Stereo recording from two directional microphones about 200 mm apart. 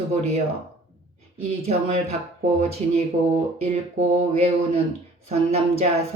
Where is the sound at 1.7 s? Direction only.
30° right (ahead or behind).